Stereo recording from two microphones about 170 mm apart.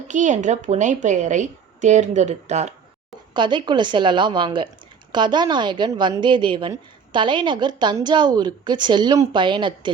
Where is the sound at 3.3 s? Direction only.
25° right (ahead or behind).